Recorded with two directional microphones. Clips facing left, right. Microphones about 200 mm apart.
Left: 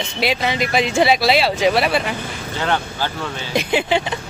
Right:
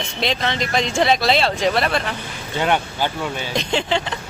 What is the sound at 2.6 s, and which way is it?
Speech, 15° right (ahead or behind).